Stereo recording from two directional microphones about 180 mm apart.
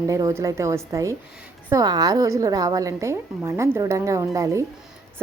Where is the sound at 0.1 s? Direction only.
20° right (ahead or behind).